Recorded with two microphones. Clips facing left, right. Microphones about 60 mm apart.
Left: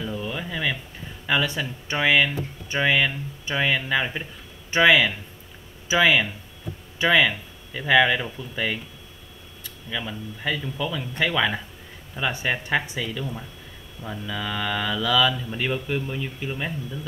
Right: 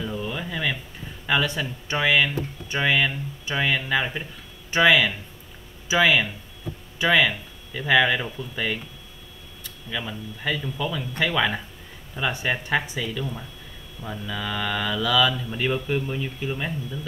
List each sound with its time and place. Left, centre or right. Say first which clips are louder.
0.0 s a sound: even; centre
1.2 s mantra: even; centre
4.8 s speech: left 1 dB; centre
7.1 s mantra: left 1 dB; centre
9.8 s mantra: even; centre
11.0 s speech: left 1 dB; centre
11.3 s mantra: even; centre